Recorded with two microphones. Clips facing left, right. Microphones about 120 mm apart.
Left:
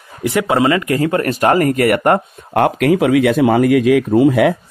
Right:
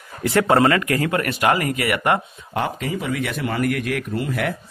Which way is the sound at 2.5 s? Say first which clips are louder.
Left 11 dB; 65° left (ahead or behind).